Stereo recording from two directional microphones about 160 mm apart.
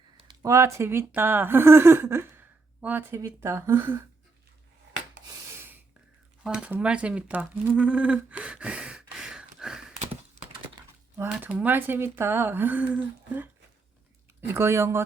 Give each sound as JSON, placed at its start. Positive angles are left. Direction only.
{"t": 0.4, "sound": "speech", "side_deg": -20}
{"t": 5.3, "sound": "rub", "side_deg": -15}
{"t": 6.4, "sound": "speech", "side_deg": -5}
{"t": 10.4, "sound": "thunk", "side_deg": -50}
{"t": 11.2, "sound": "speech", "side_deg": -10}